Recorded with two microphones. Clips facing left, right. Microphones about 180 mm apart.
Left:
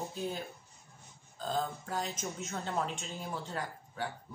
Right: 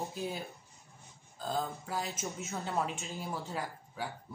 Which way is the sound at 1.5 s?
5° right (ahead or behind).